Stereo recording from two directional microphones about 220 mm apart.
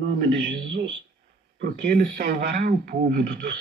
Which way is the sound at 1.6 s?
45° right (ahead or behind).